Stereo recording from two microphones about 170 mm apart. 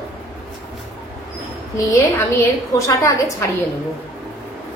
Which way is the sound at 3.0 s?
20° left (ahead or behind).